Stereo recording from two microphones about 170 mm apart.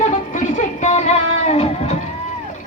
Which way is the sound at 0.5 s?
45° left (ahead or behind).